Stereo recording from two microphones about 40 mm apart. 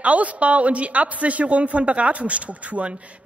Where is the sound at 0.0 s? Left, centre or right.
Right.